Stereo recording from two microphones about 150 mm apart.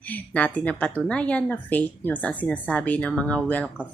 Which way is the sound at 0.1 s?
10° left (ahead or behind).